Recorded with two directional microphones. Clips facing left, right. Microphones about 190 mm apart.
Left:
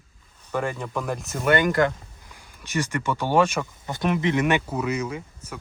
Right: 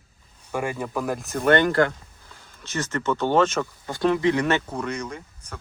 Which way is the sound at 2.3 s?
15° left (ahead or behind).